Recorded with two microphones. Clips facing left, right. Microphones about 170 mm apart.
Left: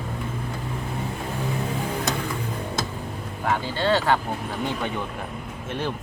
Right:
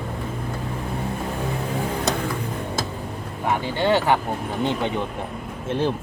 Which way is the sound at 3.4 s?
15° right (ahead or behind).